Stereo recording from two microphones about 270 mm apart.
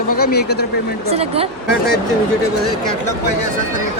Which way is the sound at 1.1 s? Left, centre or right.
Right.